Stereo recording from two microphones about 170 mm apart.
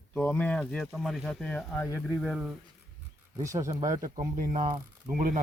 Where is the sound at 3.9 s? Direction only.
50° right (ahead or behind).